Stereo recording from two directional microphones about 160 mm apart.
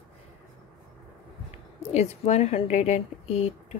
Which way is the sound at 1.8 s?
40° left (ahead or behind).